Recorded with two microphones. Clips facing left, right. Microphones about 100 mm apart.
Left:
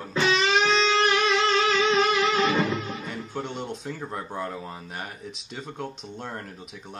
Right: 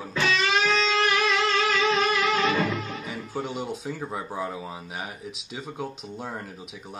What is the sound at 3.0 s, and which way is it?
Speech, 5° right (ahead or behind).